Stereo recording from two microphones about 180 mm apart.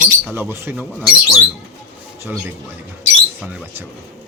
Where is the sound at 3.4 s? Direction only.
10° right (ahead or behind).